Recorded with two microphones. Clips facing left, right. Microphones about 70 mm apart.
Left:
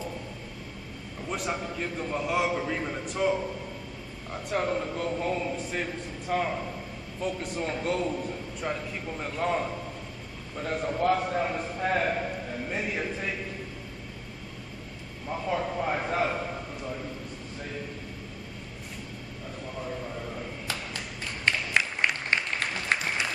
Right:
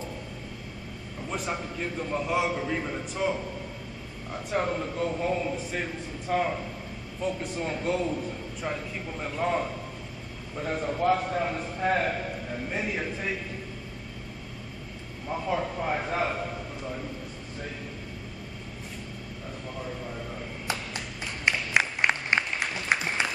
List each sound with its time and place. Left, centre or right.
1.3 s a man's voice: centre
15.2 s a man's voice: centre
21.5 s applause: centre